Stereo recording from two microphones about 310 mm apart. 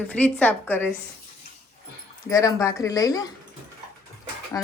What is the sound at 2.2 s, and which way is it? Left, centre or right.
A woman's voice, centre.